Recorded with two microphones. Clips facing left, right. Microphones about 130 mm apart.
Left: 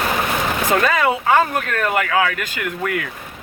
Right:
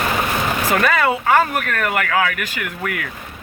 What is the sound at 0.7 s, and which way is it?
Speech, 25° left (ahead or behind).